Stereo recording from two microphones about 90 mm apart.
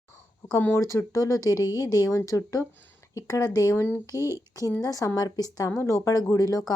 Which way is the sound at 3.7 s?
25° left (ahead or behind).